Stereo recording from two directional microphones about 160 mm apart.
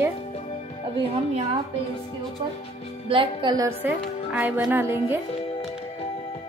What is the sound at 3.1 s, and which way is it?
Speech, 30° right (ahead or behind).